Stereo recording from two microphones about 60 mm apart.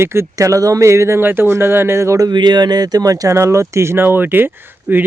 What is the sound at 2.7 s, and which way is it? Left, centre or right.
Speech, right.